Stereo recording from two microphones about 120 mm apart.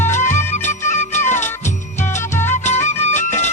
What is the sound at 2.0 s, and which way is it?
Music, 20° left (ahead or behind).